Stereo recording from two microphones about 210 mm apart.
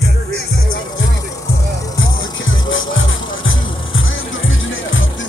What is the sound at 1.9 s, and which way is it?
Music, 65° left (ahead or behind).